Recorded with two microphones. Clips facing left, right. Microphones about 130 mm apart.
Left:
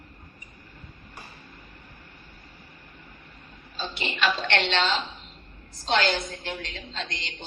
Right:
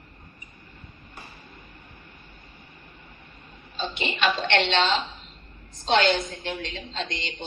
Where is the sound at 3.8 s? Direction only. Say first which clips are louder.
Right 2 dB; 20° right (ahead or behind).